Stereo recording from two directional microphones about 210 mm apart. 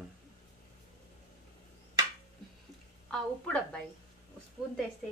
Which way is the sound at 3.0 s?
5° left (ahead or behind).